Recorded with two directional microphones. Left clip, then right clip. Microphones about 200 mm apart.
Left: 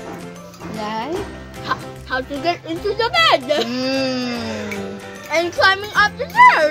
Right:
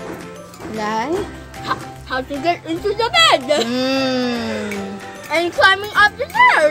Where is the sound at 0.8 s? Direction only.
35° right (ahead or behind).